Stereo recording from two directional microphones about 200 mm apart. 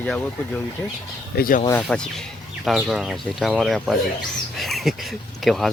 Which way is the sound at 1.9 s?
5° left (ahead or behind).